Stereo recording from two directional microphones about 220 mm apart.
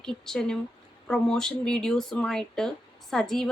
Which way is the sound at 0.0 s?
5° left (ahead or behind).